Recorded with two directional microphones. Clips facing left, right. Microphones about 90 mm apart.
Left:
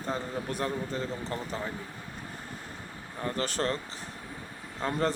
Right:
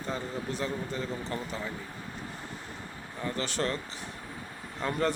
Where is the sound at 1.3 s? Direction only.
35° left (ahead or behind).